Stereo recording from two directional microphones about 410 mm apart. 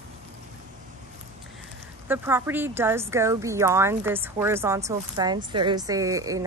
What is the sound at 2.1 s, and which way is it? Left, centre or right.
Speech, centre.